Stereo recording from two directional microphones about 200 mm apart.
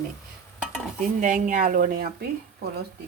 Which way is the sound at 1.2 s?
40° right (ahead or behind).